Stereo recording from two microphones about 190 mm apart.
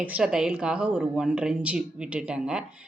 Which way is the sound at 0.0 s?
5° right (ahead or behind).